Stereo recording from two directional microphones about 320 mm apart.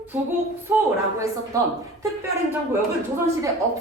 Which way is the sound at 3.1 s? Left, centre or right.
Centre.